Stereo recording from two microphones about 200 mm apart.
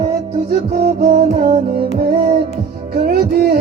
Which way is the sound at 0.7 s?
40° right (ahead or behind).